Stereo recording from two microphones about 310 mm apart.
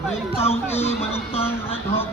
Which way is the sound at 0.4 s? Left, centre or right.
Centre.